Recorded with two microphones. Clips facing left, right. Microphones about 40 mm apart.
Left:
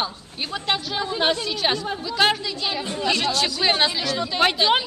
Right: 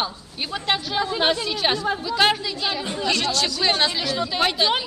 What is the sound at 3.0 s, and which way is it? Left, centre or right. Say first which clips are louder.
Speech: left 1 dB; centre.